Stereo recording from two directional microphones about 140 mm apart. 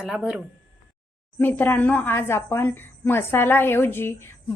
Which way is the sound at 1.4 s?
15° left (ahead or behind).